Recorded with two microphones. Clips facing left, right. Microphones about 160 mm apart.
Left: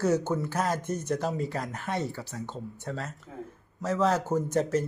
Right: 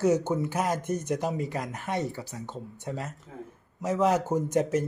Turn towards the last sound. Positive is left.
turn(degrees=-15)  # may be behind; listen again after turning